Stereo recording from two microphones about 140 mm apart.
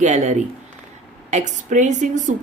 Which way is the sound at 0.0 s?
55° right (ahead or behind).